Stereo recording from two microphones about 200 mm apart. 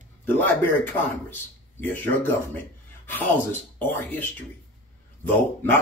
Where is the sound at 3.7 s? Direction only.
10° left (ahead or behind).